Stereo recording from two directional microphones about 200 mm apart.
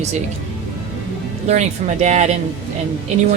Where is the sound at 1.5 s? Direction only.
35° right (ahead or behind).